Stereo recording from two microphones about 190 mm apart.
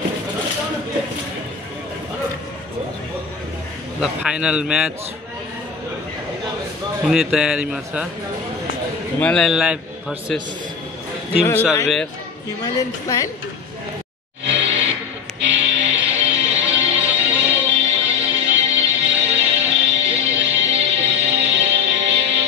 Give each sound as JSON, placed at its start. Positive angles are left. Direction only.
{"t": 4.0, "sound": "a man's voice", "side_deg": -5}
{"t": 7.1, "sound": "a man's voice", "side_deg": 0}
{"t": 9.2, "sound": "a man's voice", "side_deg": 5}
{"t": 11.4, "sound": "a woman's voice", "side_deg": 10}
{"t": 14.4, "sound": "music", "side_deg": -70}